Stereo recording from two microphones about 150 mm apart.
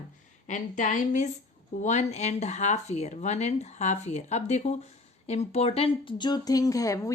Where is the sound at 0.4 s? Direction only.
55° left (ahead or behind).